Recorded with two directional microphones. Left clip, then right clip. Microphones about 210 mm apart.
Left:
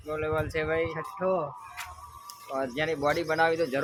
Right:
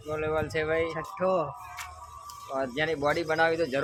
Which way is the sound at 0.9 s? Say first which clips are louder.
Right 1 dB; 40° right (ahead or behind).